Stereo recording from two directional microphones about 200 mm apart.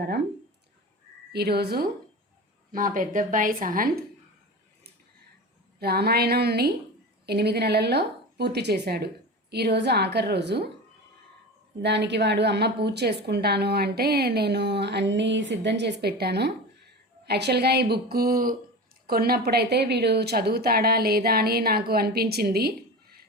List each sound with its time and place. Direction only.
1.3 s a woman's voice: 55° right (ahead or behind)
5.8 s a woman's voice: 50° right (ahead or behind)
11.8 s a woman's voice: 60° right (ahead or behind)